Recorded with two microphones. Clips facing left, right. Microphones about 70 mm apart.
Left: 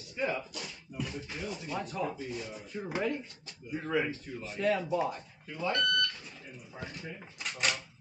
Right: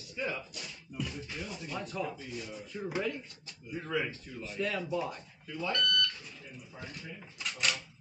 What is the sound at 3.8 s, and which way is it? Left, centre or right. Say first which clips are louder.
Speech: left 3 dB; centre.